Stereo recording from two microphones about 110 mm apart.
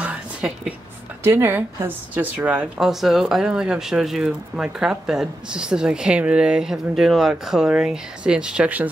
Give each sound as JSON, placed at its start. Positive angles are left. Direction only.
{"t": 0.0, "sound": "a sound", "side_deg": -10}
{"t": 1.2, "sound": "a woman's voice", "side_deg": -25}
{"t": 2.8, "sound": "speech", "side_deg": -5}